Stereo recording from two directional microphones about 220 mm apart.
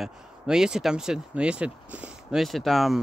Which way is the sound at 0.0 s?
5° right (ahead or behind).